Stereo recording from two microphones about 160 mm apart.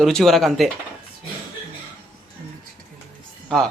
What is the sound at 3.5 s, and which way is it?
Speech, 5° left (ahead or behind).